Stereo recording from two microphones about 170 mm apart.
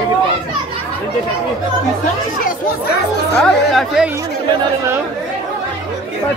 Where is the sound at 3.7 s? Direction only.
Centre (ahead or behind).